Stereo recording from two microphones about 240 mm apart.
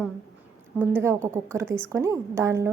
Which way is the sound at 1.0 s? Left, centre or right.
Centre.